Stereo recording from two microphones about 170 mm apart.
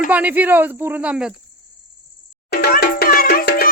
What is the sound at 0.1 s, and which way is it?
Speech, 10° right (ahead or behind).